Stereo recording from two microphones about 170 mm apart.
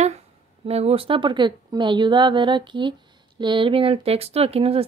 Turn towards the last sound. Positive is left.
turn(degrees=-35)  # may be behind; listen again after turning